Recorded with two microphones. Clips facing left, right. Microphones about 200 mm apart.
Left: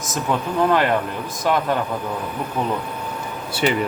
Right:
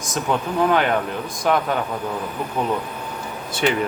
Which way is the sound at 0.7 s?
Centre (ahead or behind).